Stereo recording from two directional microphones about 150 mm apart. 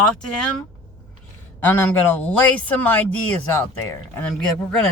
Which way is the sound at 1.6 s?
15° left (ahead or behind).